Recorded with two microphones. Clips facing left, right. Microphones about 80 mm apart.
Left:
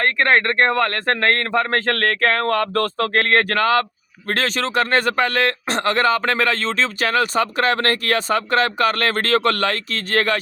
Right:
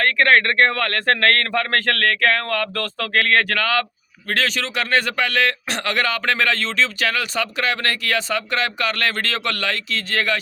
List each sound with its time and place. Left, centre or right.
0.0 s a man's voice: left